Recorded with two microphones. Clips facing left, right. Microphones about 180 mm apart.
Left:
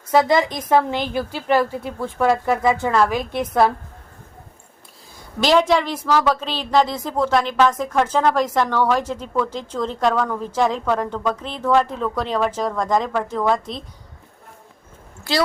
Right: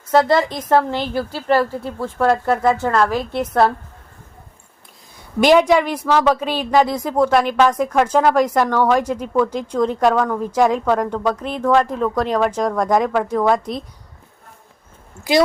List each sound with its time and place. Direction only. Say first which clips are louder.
0.1 s a woman's voice: right 1 dB; 10° left (ahead or behind)
5.5 s speech: right 3 dB; 15° right (ahead or behind)
7.9 s a woman's voice: right 3 dB; 5° left (ahead or behind)